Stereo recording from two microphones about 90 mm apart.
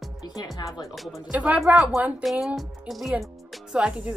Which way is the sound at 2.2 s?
Centre (ahead or behind).